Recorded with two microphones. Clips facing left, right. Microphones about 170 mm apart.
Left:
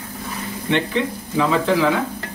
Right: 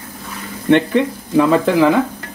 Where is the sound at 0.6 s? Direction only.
55° right (ahead or behind).